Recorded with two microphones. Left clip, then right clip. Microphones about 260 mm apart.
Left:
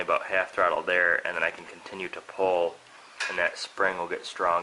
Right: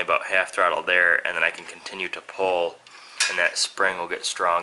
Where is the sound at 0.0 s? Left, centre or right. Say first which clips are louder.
Right 4 dB; centre.